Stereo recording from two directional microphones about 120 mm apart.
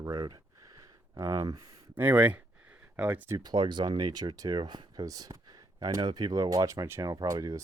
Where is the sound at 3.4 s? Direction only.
35° right (ahead or behind).